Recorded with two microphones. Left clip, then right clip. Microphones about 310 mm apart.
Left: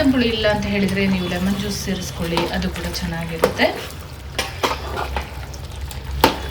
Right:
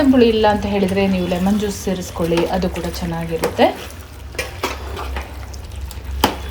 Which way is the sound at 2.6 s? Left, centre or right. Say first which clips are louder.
Right 3 dB; centre.